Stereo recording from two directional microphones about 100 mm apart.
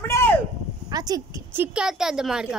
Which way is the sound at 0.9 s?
40° right (ahead or behind).